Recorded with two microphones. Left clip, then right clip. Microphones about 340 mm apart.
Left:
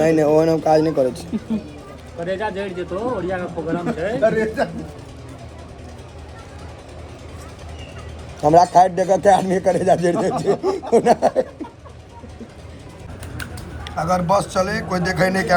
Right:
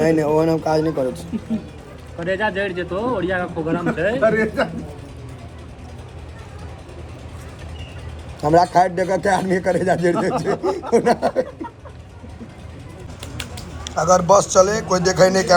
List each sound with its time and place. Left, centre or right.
0.0 s speech: centre
2.2 s speech: right
8.4 s speech: centre
10.6 s a sound: centre
13.3 s a man's voice: centre